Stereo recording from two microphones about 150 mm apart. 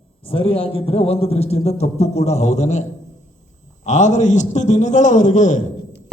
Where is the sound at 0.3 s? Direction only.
40° left (ahead or behind).